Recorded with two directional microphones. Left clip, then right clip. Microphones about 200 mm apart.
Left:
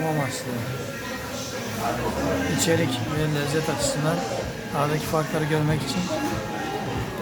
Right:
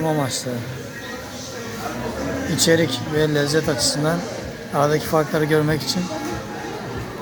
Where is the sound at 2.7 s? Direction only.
35° right (ahead or behind).